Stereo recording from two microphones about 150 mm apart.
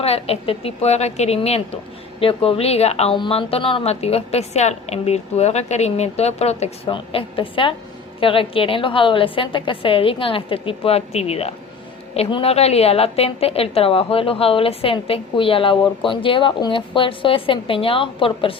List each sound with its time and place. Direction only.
0.0 s a woman's voice: 40° left (ahead or behind)